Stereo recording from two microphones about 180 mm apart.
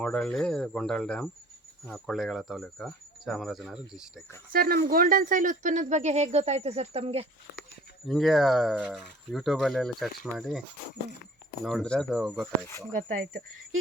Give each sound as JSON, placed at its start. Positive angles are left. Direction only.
{"t": 0.0, "sound": "speech", "side_deg": 5}
{"t": 4.5, "sound": "speech", "side_deg": -55}
{"t": 8.0, "sound": "speech", "side_deg": 0}
{"t": 11.6, "sound": "speech", "side_deg": 0}